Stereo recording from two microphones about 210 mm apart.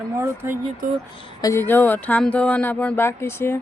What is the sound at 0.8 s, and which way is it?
Speech, 40° right (ahead or behind).